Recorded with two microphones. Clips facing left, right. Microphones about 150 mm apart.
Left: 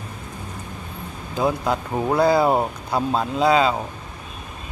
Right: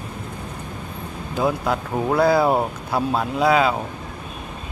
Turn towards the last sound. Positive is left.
turn(degrees=-5)  # may be behind; listen again after turning